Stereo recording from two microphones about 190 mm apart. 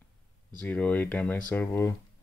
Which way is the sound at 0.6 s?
5° left (ahead or behind).